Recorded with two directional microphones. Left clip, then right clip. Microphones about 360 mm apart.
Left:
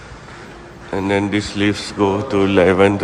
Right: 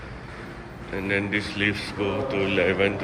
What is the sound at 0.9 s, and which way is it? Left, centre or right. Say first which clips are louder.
A man's voice: left 7 dB; centre.